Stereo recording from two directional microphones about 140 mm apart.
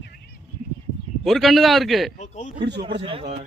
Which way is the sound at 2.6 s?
35° right (ahead or behind).